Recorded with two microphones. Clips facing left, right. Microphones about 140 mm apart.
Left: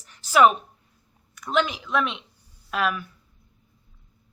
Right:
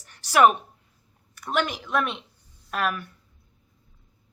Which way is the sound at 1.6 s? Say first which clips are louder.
Left 2 dB; 50° right (ahead or behind).